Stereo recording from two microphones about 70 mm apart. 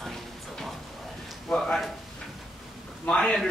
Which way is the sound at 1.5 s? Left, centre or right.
Centre.